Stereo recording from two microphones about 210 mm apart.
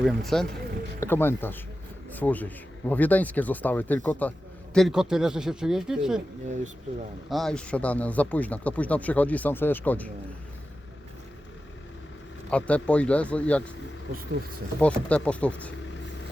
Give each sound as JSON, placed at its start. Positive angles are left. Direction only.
{"t": 0.0, "sound": "speech", "side_deg": 0}
{"t": 7.3, "sound": "speech", "side_deg": 0}
{"t": 12.5, "sound": "speech", "side_deg": 5}
{"t": 14.1, "sound": "speech", "side_deg": -45}
{"t": 14.8, "sound": "speech", "side_deg": 5}